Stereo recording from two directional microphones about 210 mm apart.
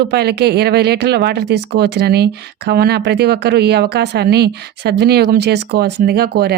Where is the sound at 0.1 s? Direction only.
50° right (ahead or behind).